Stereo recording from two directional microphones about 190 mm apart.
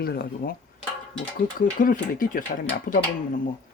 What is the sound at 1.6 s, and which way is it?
Speech, 45° left (ahead or behind).